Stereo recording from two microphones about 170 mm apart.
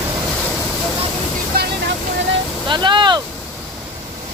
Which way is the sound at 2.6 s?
30° right (ahead or behind).